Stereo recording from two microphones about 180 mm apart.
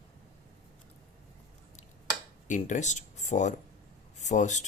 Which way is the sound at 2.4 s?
45° left (ahead or behind).